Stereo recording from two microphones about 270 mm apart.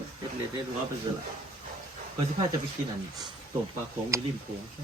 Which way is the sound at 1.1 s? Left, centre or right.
Centre.